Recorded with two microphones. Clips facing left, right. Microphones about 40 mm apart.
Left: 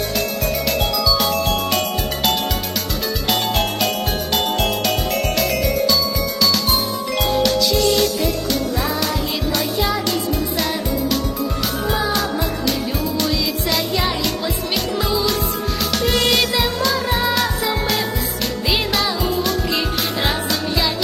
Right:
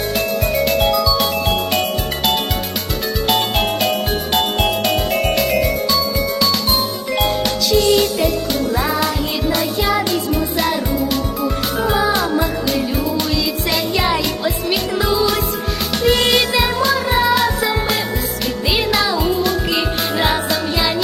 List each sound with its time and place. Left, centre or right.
0.5 s music: centre
3.2 s jingle bell: centre
5.1 s music: centre
6.4 s jingle: centre
7.8 s music: centre
13.9 s music: right
15.9 s music: centre
18.7 s music: centre